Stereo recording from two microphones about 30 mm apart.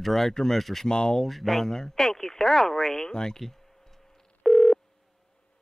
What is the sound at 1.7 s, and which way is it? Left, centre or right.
Speech, centre.